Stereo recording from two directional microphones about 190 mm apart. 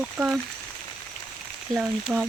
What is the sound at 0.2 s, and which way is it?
Speech, 15° right (ahead or behind).